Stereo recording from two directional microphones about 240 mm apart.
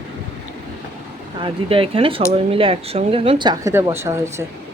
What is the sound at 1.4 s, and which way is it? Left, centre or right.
Speech, right.